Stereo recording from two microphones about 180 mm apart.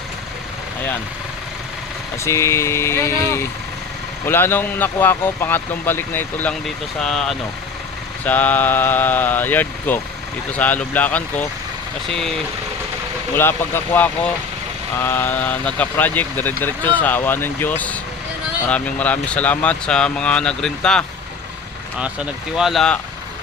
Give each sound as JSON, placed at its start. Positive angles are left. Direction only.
{"t": 2.1, "sound": "speech", "side_deg": 15}
{"t": 13.3, "sound": "speech", "side_deg": 10}